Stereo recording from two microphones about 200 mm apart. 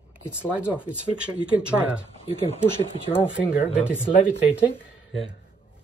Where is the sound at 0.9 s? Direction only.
5° right (ahead or behind).